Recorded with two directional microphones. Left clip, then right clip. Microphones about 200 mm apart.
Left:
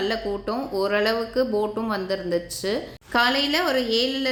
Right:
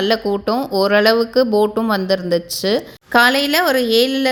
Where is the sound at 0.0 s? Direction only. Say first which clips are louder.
Right 8 dB; 45° right (ahead or behind).